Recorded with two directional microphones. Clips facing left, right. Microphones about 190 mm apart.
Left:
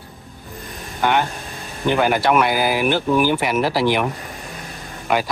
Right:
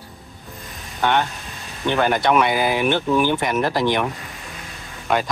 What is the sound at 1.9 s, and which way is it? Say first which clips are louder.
Speech: left 1 dB; 5° left (ahead or behind).